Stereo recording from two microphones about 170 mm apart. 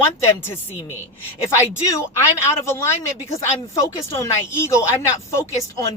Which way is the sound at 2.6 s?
15° left (ahead or behind).